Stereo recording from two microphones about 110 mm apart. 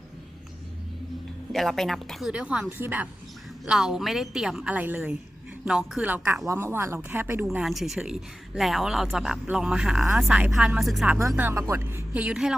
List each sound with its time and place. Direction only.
1.5 s speech: centre (ahead or behind); by 3.1 s 15° right (ahead or behind)
3.7 s speech: 5° right (ahead or behind)
6.5 s speech: 20° right (ahead or behind)
7.5 s speech: 5° right (ahead or behind)
11.3 s speech: 15° right (ahead or behind)
12.1 s speech: 10° right (ahead or behind)